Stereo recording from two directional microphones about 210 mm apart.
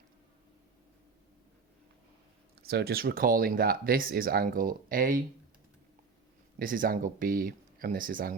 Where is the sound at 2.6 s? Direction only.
50° right (ahead or behind).